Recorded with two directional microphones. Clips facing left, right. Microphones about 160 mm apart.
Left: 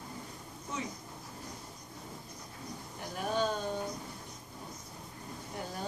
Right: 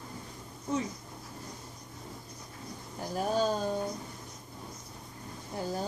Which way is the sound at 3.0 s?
35° right (ahead or behind).